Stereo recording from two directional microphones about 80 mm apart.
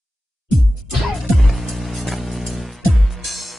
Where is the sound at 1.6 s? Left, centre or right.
Centre.